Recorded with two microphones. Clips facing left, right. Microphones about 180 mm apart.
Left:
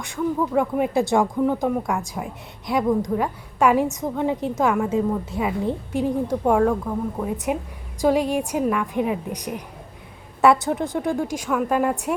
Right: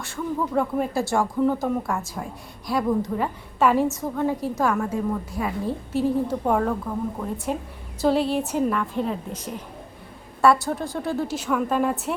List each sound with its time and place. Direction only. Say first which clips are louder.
0.0 s a woman's voice: left 4 dB; 15° left (ahead or behind)
1.9 s speech: left 2 dB; centre (ahead or behind)
2.6 s a woman's voice: left 2 dB; 15° left (ahead or behind)
7.3 s a woman's voice: left 3 dB; 15° left (ahead or behind)